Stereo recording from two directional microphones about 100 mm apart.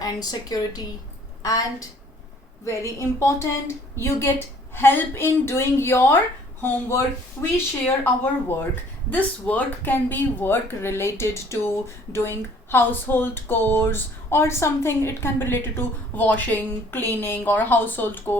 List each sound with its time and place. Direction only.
0.0 s a woman's voice: 40° left (ahead or behind)
2.6 s speech: 25° left (ahead or behind)